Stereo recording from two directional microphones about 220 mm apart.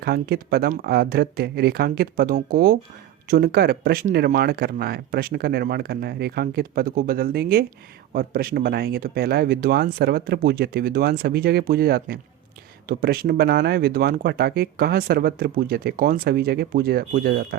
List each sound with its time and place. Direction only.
0.0 s speech: 45° right (ahead or behind)